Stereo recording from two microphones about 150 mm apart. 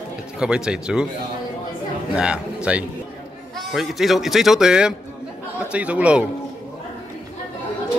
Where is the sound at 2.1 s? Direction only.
5° right (ahead or behind).